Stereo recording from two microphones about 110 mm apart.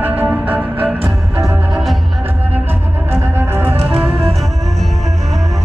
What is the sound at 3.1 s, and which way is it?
Music, 20° right (ahead or behind).